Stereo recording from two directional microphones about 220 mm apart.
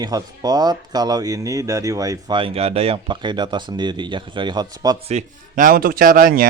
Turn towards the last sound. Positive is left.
turn(degrees=-40)  # may be behind; listen again after turning